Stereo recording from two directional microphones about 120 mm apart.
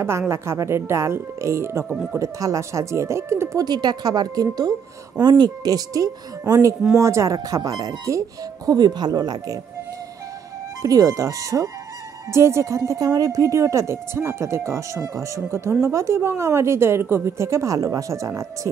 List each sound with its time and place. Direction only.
0.3 s speech: 25° right (ahead or behind)
3.6 s speech: 35° right (ahead or behind)
10.8 s speech: 30° right (ahead or behind)